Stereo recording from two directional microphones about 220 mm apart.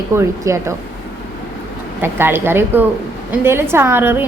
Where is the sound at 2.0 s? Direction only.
10° right (ahead or behind).